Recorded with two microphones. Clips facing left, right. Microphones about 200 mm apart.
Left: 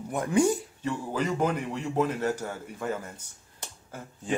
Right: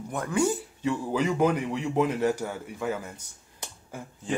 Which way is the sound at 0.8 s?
10° right (ahead or behind).